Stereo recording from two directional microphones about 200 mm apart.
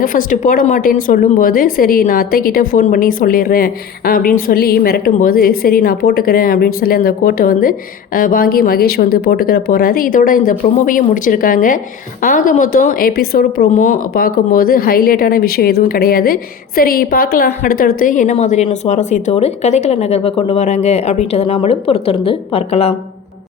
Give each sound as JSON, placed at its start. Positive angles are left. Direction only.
{"t": 0.0, "sound": "a woman's voice", "side_deg": 45}